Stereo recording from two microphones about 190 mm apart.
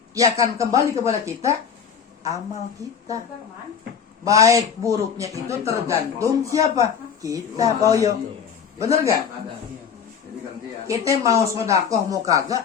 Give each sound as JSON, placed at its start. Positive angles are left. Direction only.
{"t": 0.2, "sound": "a man's voice", "side_deg": -15}
{"t": 2.8, "sound": "a man's voice", "side_deg": -15}
{"t": 4.2, "sound": "a man's voice", "side_deg": -15}
{"t": 10.8, "sound": "a man's voice", "side_deg": -15}